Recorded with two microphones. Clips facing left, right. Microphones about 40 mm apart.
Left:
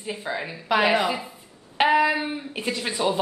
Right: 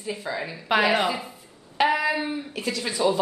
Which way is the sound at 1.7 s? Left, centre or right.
Centre.